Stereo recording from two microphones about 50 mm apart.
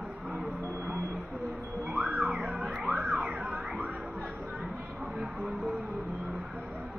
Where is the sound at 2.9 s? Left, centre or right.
Right.